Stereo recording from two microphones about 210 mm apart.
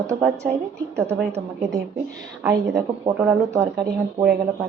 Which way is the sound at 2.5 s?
15° right (ahead or behind).